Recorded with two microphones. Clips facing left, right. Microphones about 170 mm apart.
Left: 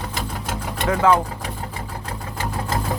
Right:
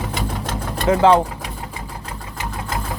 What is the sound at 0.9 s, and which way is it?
Speech, 25° right (ahead or behind).